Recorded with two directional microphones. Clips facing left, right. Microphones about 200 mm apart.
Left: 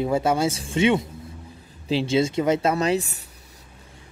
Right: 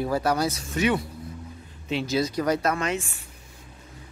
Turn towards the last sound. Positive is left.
turn(degrees=40)  # may be behind; listen again after turning